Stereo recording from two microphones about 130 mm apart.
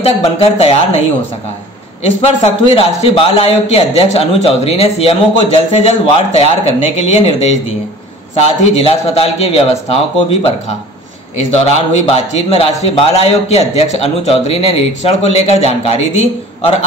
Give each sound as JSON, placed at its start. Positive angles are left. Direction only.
{"t": 0.0, "sound": "a man's voice", "side_deg": 50}
{"t": 2.0, "sound": "a man's voice", "side_deg": 50}
{"t": 11.3, "sound": "a man's voice", "side_deg": 55}